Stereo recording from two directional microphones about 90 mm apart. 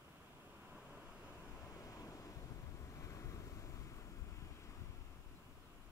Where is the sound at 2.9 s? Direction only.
35° left (ahead or behind).